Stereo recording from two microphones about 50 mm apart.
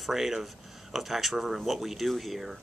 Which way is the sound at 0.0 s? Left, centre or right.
Centre.